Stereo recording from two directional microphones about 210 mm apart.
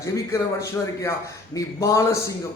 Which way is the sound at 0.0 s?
15° left (ahead or behind).